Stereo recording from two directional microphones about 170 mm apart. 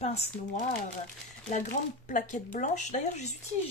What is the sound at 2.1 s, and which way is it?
Speech, 50° left (ahead or behind).